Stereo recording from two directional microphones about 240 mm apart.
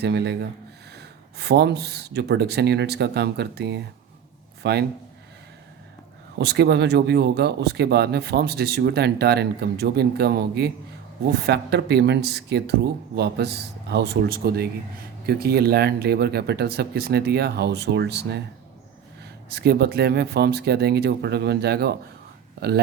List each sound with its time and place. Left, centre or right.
0.0 s speech: right
6.4 s speech: right